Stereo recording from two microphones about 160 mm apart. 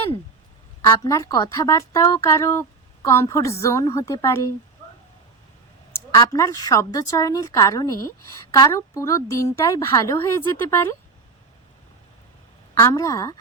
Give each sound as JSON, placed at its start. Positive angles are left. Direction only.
{"t": 0.8, "sound": "a woman's voice", "side_deg": 20}
{"t": 5.9, "sound": "a woman's voice", "side_deg": 20}
{"t": 12.7, "sound": "a woman's voice", "side_deg": 20}